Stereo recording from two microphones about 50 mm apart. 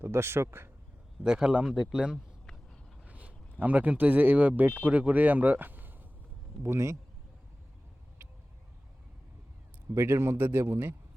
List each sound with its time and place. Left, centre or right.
0.0 s speech: right
1.2 s speech: centre
1.6 s speech: centre
1.9 s speech: centre
3.0 s a sound: right
3.6 s speech: right
6.6 s speech: right
9.9 s a man's voice: right
10.3 s speech: right
10.6 s a man's voice: right